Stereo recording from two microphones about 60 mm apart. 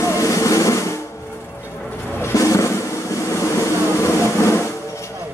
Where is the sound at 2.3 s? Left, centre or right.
Left.